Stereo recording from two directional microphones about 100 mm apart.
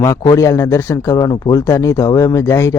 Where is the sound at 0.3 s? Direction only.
30° left (ahead or behind).